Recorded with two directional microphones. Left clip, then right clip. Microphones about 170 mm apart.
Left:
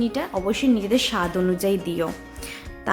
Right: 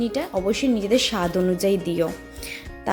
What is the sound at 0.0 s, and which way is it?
A woman's voice, 15° right (ahead or behind).